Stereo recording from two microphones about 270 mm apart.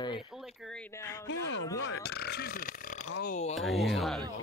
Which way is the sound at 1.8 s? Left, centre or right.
Left.